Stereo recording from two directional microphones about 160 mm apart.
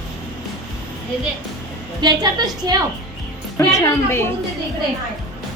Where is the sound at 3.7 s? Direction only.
20° left (ahead or behind).